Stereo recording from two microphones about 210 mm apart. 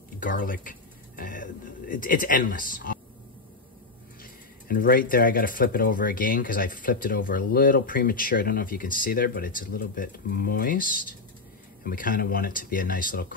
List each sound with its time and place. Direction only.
0.2 s speech: 40° left (ahead or behind)
4.2 s speech: 45° left (ahead or behind)